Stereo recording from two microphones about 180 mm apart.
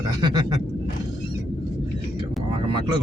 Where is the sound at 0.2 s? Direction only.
25° right (ahead or behind).